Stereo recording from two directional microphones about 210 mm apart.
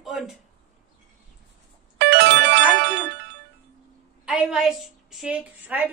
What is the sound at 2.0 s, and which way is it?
Music, 55° right (ahead or behind).